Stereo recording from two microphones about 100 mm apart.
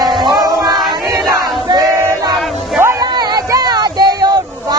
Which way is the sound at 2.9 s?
45° right (ahead or behind).